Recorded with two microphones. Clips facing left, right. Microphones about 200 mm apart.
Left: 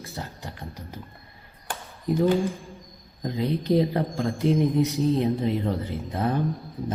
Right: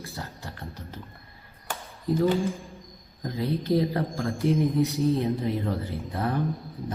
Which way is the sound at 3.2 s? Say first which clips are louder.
Left 2 dB; 20° left (ahead or behind).